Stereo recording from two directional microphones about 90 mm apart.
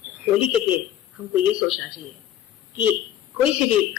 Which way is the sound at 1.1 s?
15° right (ahead or behind).